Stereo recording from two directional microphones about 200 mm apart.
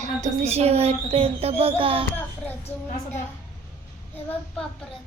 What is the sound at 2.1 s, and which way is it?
A child's voice, 10° left (ahead or behind).